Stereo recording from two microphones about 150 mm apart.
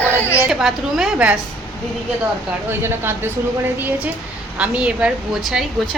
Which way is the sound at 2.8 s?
15° right (ahead or behind).